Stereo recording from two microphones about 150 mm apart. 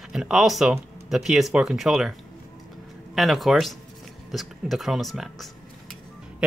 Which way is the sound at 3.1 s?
Centre (ahead or behind).